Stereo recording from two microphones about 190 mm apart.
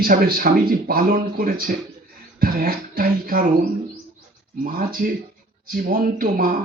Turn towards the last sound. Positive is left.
turn(degrees=-45)  # may be behind; listen again after turning